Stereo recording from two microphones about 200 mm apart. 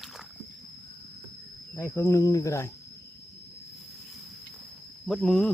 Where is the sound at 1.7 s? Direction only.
15° left (ahead or behind).